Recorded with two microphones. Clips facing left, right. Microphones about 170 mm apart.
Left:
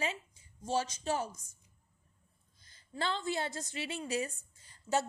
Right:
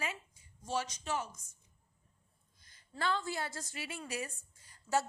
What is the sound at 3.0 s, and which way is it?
A woman's voice, 25° left (ahead or behind).